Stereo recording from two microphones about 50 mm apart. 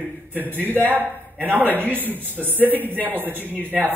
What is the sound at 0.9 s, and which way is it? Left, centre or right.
Speech, right.